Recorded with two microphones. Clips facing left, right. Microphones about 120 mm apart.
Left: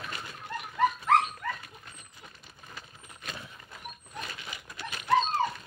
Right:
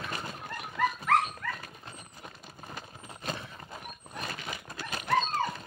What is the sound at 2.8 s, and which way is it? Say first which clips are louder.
Horse: right 5 dB; 40° right (ahead or behind).